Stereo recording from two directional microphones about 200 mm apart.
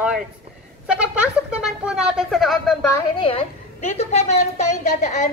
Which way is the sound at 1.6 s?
5° right (ahead or behind).